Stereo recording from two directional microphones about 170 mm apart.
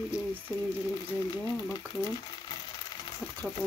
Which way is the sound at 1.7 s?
25° left (ahead or behind).